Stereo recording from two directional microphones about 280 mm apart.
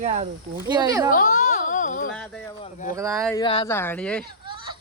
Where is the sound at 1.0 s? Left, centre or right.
Left.